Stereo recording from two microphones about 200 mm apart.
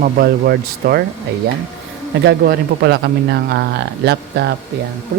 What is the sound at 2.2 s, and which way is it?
Speech, 55° right (ahead or behind).